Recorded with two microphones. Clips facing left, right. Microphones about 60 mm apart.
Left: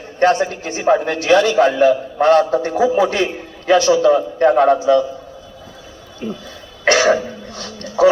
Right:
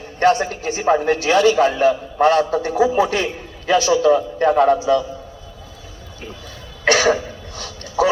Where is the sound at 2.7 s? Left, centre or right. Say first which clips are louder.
Left 1 dB; centre.